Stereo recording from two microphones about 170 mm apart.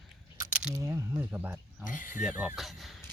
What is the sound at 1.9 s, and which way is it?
Speech, 50° left (ahead or behind).